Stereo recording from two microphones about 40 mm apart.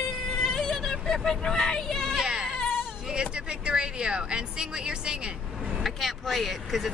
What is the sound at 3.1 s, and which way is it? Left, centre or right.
Speech, right.